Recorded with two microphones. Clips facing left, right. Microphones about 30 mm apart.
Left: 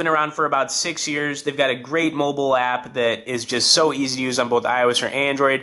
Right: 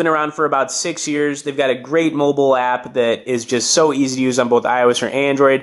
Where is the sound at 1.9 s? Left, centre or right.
Left.